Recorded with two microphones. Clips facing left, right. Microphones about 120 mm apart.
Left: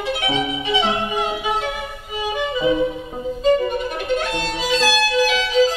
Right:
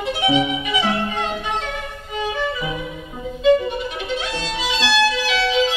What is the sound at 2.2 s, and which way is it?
Violin, 15° left (ahead or behind).